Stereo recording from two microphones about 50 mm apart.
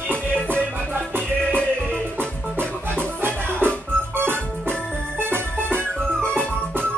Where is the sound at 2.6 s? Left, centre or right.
Right.